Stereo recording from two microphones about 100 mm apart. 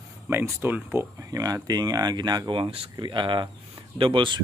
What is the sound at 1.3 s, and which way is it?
Speech, 40° right (ahead or behind).